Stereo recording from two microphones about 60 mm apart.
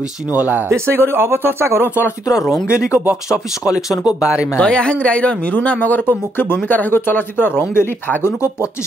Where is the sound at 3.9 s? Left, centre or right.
Left.